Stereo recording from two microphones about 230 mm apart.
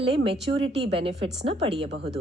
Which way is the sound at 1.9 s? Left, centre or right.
Right.